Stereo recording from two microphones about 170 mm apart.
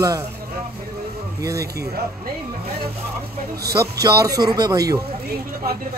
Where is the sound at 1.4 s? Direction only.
20° right (ahead or behind).